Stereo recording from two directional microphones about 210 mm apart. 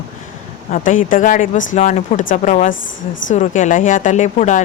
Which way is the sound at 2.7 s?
65° left (ahead or behind).